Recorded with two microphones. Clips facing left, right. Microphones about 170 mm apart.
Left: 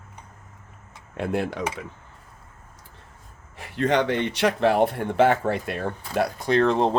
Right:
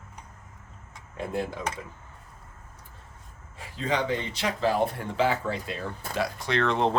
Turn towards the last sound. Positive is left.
turn(degrees=40)  # may be behind; listen again after turning